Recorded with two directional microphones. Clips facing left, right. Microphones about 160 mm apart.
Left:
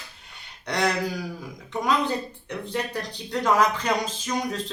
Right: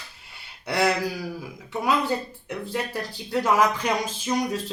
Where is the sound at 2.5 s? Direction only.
5° right (ahead or behind).